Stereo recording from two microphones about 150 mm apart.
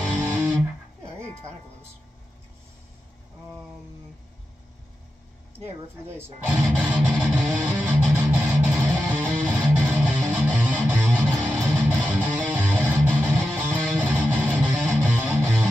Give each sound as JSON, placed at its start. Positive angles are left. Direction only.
{"t": 6.1, "sound": "music", "side_deg": -15}